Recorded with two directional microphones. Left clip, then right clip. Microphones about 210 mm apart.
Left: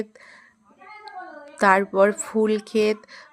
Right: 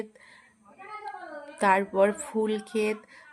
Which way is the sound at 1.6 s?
20° left (ahead or behind).